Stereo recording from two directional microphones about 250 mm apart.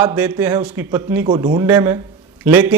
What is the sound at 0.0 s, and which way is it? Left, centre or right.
Speech, centre.